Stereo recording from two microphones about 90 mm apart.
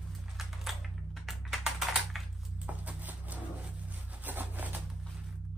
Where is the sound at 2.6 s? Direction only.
15° right (ahead or behind).